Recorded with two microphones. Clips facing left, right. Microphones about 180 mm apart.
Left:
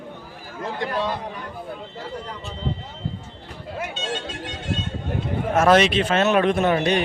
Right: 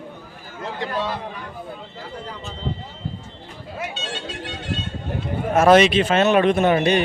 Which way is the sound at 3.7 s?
45° left (ahead or behind).